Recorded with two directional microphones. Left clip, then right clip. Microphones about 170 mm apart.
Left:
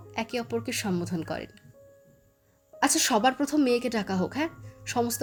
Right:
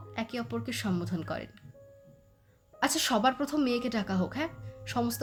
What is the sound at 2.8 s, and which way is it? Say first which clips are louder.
A woman's voice: left 4 dB; 15° left (ahead or behind).